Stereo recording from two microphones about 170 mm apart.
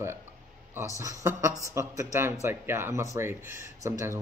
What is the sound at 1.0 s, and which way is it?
Speech, 20° right (ahead or behind).